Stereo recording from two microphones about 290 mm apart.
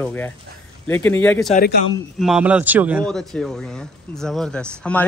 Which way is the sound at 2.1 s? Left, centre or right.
Centre.